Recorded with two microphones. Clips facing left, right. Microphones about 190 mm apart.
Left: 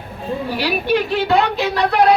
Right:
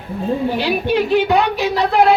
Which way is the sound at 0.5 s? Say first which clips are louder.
Right 1 dB; 20° right (ahead or behind).